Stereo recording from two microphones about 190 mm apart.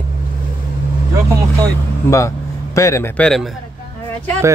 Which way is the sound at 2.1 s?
15° left (ahead or behind).